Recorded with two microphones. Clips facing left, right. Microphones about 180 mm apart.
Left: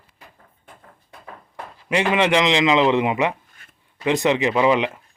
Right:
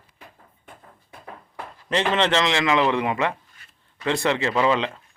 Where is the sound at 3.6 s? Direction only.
50° left (ahead or behind).